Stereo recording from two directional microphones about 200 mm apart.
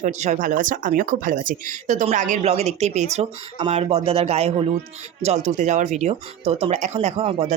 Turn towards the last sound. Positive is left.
turn(degrees=-30)  # may be behind; listen again after turning